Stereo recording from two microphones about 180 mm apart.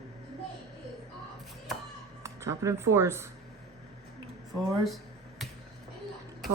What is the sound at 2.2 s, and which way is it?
Speech, 15° right (ahead or behind).